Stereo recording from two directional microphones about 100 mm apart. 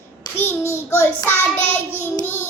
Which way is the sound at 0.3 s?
25° left (ahead or behind).